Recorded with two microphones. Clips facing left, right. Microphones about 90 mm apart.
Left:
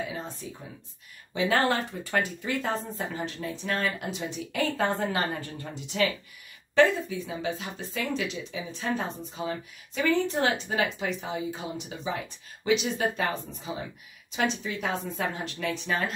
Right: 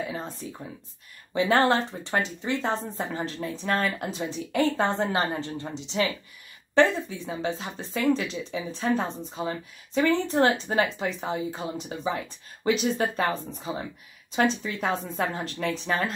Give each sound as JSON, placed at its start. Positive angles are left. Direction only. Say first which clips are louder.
{"t": 0.1, "sound": "speech", "louder": "right 2 dB", "side_deg": -40}